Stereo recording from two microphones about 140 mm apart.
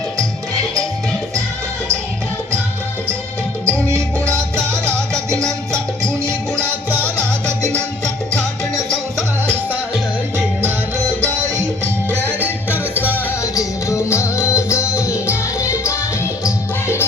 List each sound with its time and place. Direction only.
3.7 s music: 20° right (ahead or behind)
4.9 s music: 5° left (ahead or behind)
5.7 s music: 20° right (ahead or behind)
10.3 s music: 15° right (ahead or behind)
12.9 s music: 10° right (ahead or behind)
13.4 s music: 20° left (ahead or behind)